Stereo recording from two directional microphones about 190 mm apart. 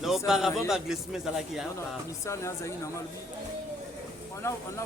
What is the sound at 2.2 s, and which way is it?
Speech, 15° left (ahead or behind).